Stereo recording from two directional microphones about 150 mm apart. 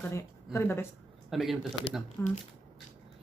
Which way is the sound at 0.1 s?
15° left (ahead or behind).